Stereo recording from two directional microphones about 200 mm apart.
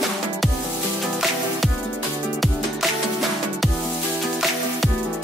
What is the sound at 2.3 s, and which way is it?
Music, centre (ahead or behind).